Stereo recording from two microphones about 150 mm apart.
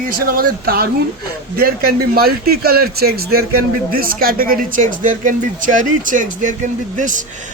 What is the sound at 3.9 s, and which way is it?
Speech, 80° right.